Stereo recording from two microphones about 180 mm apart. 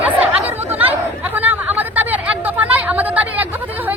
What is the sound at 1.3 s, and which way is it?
Chatter, 10° right (ahead or behind).